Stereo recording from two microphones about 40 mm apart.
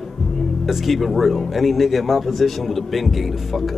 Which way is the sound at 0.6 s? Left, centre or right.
Centre.